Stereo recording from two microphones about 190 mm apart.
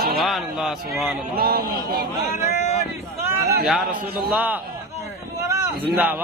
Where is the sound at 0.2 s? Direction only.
Centre (ahead or behind).